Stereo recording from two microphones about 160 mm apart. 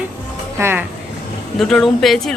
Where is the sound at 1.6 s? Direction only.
5° left (ahead or behind).